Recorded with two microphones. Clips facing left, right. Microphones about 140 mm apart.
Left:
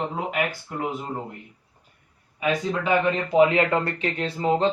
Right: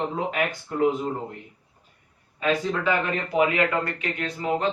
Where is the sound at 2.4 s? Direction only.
15° left (ahead or behind).